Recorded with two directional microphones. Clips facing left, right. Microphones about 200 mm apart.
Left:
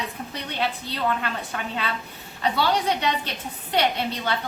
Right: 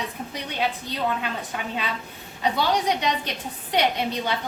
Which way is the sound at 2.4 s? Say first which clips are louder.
Even; 15° right (ahead or behind).